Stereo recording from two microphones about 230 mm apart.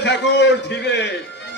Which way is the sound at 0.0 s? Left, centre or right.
Left.